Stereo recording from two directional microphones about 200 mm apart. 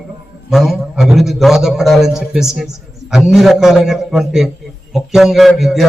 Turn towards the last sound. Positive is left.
turn(degrees=0)  # may be behind; listen again after turning